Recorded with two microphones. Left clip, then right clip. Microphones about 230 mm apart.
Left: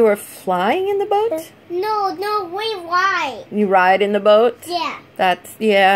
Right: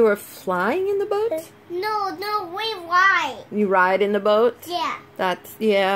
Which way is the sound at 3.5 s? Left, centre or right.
Centre.